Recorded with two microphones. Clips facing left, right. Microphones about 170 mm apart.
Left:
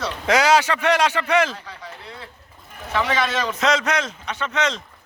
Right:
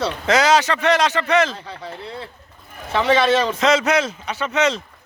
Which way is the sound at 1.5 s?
30° right (ahead or behind).